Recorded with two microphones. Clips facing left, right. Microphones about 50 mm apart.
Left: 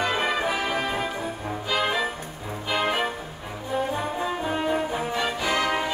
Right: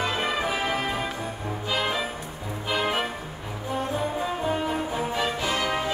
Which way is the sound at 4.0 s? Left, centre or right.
Centre.